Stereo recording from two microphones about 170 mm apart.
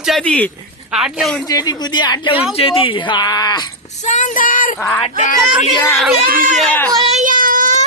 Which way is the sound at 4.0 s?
45° left (ahead or behind).